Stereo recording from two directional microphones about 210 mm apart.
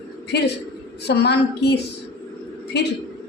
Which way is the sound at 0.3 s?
55° left (ahead or behind).